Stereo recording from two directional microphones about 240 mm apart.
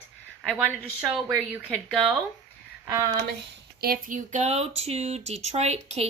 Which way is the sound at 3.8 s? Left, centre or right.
Right.